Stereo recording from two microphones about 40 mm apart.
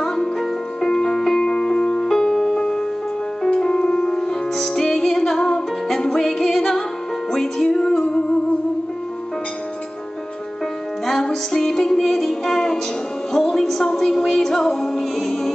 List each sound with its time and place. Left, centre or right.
0.0 s music: centre
11.1 s music: centre